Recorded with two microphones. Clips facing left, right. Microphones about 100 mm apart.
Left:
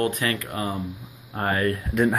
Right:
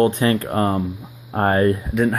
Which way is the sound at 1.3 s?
45° right (ahead or behind).